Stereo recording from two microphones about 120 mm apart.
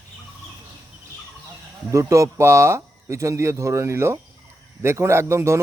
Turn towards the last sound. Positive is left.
turn(degrees=-20)  # may be behind; listen again after turning